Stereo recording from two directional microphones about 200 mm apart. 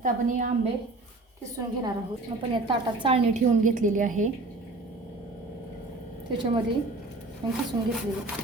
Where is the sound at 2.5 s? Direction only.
25° right (ahead or behind); by 4.3 s 40° right (ahead or behind).